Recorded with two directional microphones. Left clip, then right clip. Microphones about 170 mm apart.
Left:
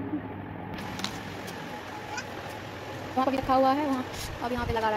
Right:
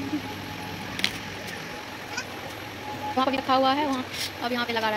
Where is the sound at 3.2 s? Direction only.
Centre (ahead or behind).